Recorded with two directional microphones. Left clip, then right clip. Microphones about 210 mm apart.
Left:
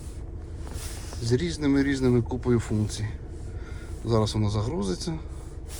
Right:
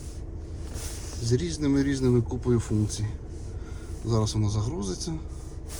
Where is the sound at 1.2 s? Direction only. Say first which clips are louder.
Left 2 dB; 15° right (ahead or behind).